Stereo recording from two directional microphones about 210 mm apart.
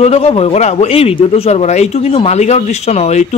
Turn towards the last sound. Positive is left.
turn(degrees=30)  # may be behind; listen again after turning